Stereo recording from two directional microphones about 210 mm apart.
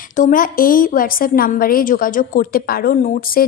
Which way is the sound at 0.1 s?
40° left (ahead or behind).